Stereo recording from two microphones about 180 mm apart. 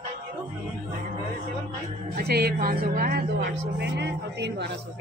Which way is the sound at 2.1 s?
60° right (ahead or behind).